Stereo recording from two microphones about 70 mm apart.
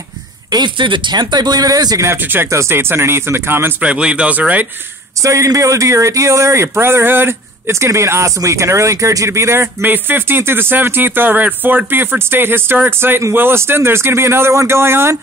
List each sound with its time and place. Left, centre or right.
0.5 s speech: right
2.4 s speech: right
3.8 s speech: centre
5.2 s speech: right